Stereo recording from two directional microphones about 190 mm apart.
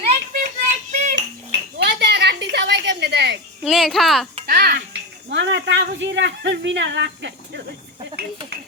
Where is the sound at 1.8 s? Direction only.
60° right (ahead or behind).